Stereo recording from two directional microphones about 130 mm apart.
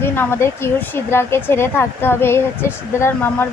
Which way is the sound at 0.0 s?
15° left (ahead or behind).